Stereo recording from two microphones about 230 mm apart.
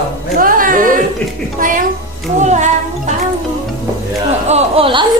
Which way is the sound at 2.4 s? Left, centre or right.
Right.